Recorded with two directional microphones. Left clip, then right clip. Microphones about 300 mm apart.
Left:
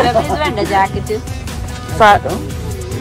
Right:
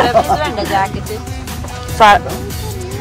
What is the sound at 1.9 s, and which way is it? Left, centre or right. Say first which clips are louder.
Speech: right 1 dB; centre.